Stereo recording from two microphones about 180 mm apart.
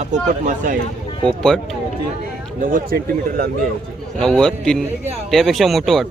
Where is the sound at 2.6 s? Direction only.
50° right (ahead or behind).